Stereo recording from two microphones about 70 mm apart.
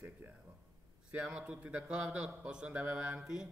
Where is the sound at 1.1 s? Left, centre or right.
Centre.